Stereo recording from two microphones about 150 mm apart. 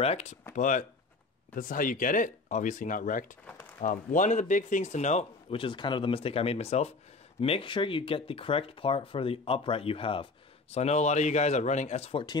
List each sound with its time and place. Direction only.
0.0 s speech: 45° left (ahead or behind)
0.6 s speech: 60° left (ahead or behind)
3.4 s a sound: 5° left (ahead or behind)
3.8 s speech: 60° left (ahead or behind)
5.6 s speech: 30° left (ahead or behind)